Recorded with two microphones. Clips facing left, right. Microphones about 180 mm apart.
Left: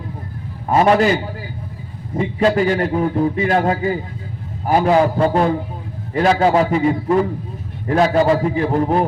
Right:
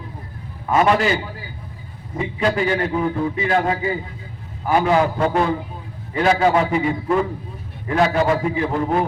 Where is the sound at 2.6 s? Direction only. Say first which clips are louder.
Left 3 dB; 40° left (ahead or behind).